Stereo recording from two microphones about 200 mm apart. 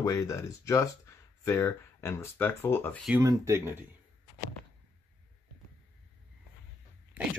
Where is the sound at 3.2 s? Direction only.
15° right (ahead or behind).